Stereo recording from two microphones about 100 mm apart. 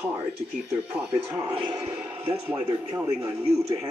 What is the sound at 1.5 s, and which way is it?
Speech, 55° right (ahead or behind).